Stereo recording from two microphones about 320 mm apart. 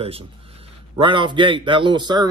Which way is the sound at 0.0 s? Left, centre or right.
Centre.